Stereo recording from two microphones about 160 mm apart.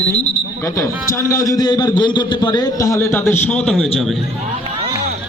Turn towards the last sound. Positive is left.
turn(degrees=0)  # may be behind; listen again after turning